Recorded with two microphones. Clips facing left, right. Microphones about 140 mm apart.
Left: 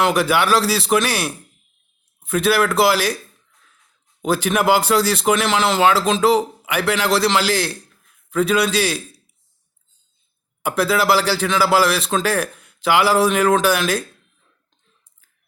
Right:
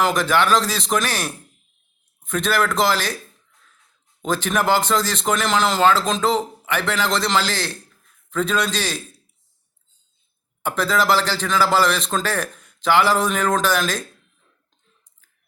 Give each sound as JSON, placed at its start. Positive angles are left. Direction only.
{"t": 0.0, "sound": "a man's voice", "side_deg": 10}
{"t": 4.2, "sound": "a man's voice", "side_deg": 10}
{"t": 10.6, "sound": "a man's voice", "side_deg": 10}